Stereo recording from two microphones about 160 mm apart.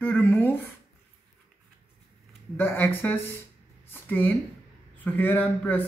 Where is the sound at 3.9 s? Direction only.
10° left (ahead or behind).